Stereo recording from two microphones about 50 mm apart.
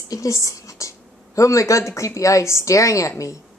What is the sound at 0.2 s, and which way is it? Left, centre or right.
Speech, left.